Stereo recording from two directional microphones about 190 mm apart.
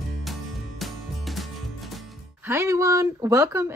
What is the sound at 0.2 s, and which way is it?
Music, centre (ahead or behind).